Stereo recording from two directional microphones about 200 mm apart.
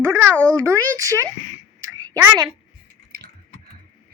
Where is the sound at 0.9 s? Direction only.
15° right (ahead or behind).